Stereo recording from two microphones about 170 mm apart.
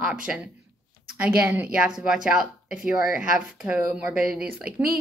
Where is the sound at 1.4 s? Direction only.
10° right (ahead or behind).